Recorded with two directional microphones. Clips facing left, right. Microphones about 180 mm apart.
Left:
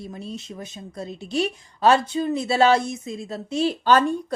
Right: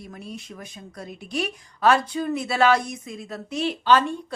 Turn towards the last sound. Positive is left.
turn(degrees=45)  # may be behind; listen again after turning